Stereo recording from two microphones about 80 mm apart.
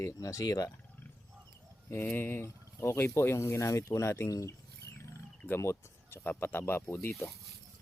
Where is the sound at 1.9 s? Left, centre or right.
Left.